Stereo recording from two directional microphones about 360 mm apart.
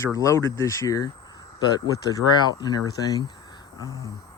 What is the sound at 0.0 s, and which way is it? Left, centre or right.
Speech, centre.